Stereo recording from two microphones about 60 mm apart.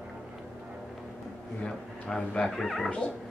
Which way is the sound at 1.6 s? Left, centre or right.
Centre.